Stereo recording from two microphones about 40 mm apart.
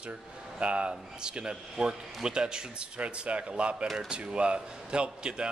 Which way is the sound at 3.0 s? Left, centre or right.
Right.